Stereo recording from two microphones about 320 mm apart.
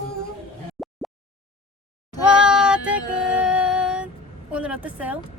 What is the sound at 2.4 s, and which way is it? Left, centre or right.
Music, centre.